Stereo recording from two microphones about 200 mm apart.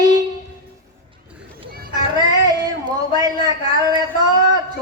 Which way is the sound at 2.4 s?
20° right (ahead or behind).